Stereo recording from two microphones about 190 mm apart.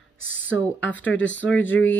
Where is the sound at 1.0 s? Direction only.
75° left (ahead or behind).